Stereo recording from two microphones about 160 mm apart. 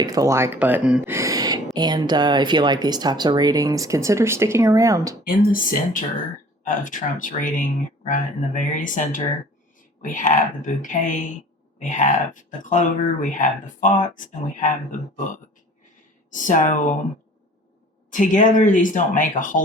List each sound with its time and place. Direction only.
0.0 s speech: 20° right (ahead or behind)
1.1 s a sound: 20° right (ahead or behind)
1.7 s speech: 25° right (ahead or behind)
5.2 s speech: 60° left (ahead or behind)
16.3 s speech: 50° left (ahead or behind)
18.1 s speech: 50° left (ahead or behind)